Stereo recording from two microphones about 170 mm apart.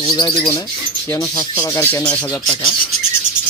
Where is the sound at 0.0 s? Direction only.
25° left (ahead or behind).